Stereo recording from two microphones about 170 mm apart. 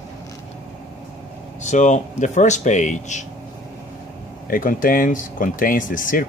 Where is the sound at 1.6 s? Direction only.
45° left (ahead or behind).